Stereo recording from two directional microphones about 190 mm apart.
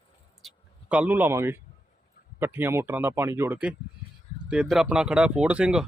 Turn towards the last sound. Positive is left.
turn(degrees=-5)  # may be behind; listen again after turning